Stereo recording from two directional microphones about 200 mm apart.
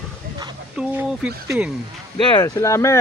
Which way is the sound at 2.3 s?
15° left (ahead or behind).